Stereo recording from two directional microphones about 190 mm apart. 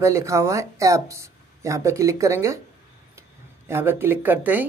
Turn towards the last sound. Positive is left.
turn(degrees=-10)  # may be behind; listen again after turning